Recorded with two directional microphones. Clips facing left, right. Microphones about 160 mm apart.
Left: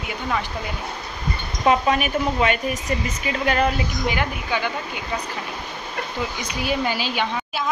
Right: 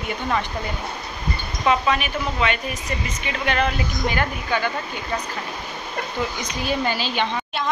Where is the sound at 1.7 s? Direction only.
45° left (ahead or behind).